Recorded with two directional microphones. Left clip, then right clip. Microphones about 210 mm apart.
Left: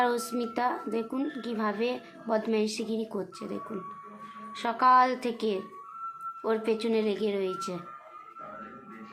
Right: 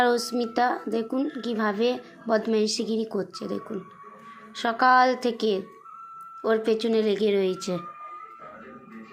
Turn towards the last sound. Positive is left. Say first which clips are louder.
# right 6 dB
turn(degrees=-20)  # may be behind; listen again after turning